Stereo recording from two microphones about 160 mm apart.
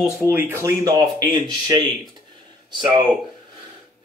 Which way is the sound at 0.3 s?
15° right (ahead or behind).